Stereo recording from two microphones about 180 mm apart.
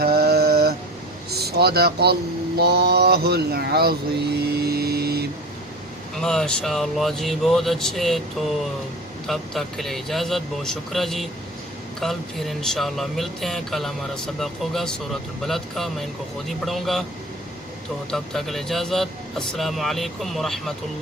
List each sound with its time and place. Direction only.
0.0 s a sound: 60° right (ahead or behind)
1.3 s speech: 60° right (ahead or behind)
6.2 s speech: 5° left (ahead or behind)
18.1 s speech: centre (ahead or behind)